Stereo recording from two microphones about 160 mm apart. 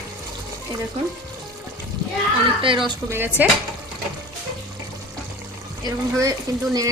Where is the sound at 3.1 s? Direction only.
15° right (ahead or behind).